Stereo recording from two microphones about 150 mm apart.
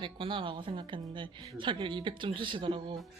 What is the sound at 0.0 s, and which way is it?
Speech, 35° right (ahead or behind).